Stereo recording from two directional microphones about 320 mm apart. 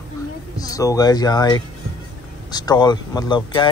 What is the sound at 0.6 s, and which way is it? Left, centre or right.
Speech, centre.